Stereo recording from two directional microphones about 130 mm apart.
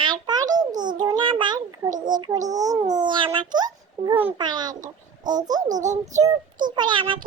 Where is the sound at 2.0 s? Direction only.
30° right (ahead or behind).